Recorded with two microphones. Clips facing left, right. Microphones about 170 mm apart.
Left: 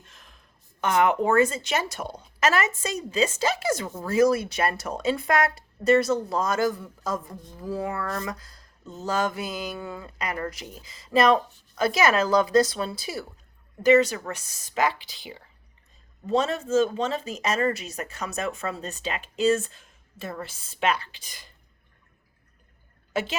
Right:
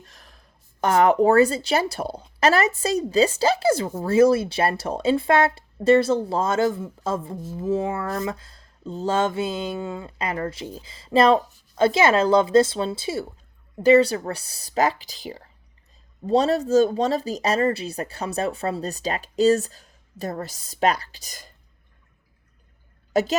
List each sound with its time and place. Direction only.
0.0 s speech: 35° right (ahead or behind)
23.1 s a woman's voice: 40° right (ahead or behind)